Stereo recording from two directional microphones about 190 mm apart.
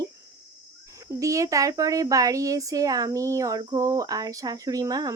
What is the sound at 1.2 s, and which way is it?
Speech, 15° right (ahead or behind).